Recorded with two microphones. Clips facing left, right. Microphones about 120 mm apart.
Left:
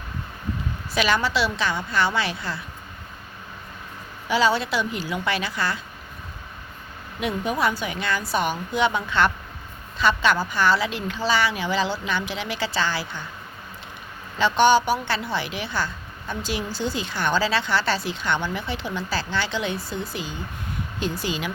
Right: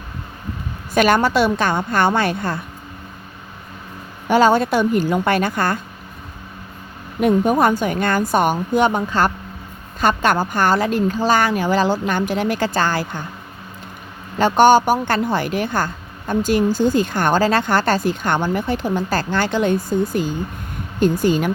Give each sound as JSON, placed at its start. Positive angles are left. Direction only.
{"t": 0.9, "sound": "speech", "side_deg": -50}
{"t": 4.3, "sound": "speech", "side_deg": -50}
{"t": 7.2, "sound": "speech", "side_deg": -45}
{"t": 14.3, "sound": "speech", "side_deg": -45}